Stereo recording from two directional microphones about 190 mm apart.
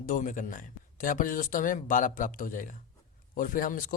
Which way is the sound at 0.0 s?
45° left (ahead or behind).